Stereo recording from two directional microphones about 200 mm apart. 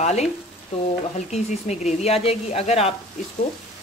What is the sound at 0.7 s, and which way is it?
Frying, 30° left (ahead or behind).